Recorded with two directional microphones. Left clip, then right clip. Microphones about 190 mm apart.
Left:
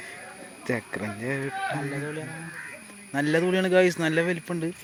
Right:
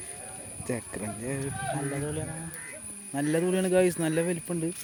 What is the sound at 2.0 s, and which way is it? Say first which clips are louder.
Speech: left 1 dB; 25° right (ahead or behind).